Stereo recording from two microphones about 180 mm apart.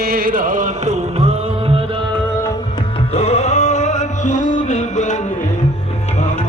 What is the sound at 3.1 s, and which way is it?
Music, 35° left (ahead or behind).